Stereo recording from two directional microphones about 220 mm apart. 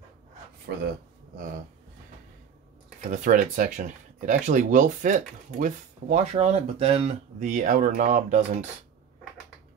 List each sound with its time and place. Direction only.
0.7 s speech: 50° right (ahead or behind)
3.1 s speech: 35° right (ahead or behind)